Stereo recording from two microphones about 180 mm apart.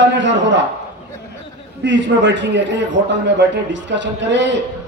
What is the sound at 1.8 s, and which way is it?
A man's voice, 80° right.